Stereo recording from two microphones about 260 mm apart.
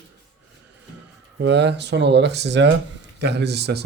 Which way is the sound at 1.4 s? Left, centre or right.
Right.